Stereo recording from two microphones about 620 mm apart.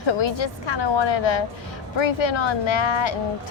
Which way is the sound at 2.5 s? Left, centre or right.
Left.